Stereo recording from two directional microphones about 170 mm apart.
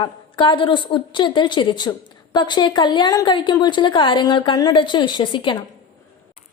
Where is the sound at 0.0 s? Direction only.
30° left (ahead or behind).